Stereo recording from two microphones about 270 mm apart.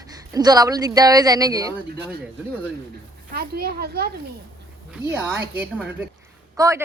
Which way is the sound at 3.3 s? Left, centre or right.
Right.